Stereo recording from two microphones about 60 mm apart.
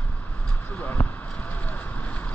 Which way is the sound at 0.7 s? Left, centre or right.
Left.